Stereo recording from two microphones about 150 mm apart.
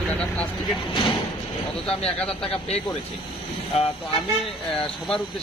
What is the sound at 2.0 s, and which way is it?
Speech, 5° left (ahead or behind).